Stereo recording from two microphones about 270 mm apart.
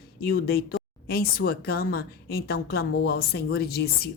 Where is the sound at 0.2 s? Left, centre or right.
Left.